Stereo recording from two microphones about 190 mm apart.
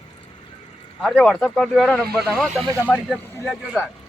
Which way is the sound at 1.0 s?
Centre (ahead or behind).